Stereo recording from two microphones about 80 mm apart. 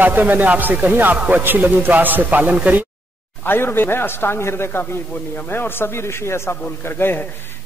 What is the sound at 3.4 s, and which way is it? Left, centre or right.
A man's voice, left.